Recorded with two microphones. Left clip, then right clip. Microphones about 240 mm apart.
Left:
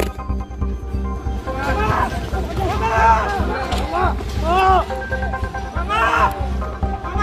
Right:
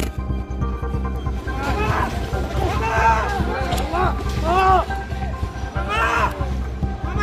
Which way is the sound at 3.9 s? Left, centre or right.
Centre.